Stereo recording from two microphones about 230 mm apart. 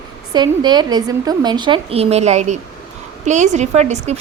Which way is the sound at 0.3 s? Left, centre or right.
Centre.